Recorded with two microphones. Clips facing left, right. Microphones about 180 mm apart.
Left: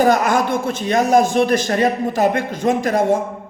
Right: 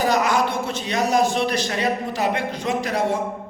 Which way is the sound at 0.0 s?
50° left (ahead or behind).